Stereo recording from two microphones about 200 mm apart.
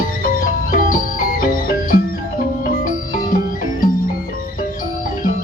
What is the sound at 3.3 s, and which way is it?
Music, 45° left (ahead or behind).